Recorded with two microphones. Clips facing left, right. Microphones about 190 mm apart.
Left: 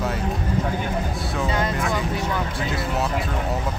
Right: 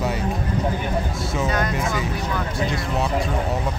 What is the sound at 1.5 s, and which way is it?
Speech, 25° left (ahead or behind).